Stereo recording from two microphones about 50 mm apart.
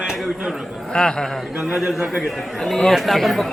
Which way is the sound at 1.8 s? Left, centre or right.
Centre.